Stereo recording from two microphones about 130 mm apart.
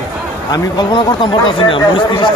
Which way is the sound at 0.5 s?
35° left (ahead or behind).